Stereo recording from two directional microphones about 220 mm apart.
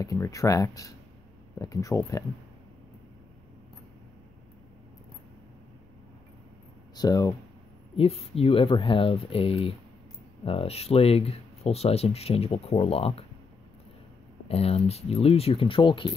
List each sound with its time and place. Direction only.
0.0 s speech: 15° left (ahead or behind)
7.0 s speech: 15° left (ahead or behind)
7.9 s speech: 25° left (ahead or behind)
14.5 s speech: 25° left (ahead or behind)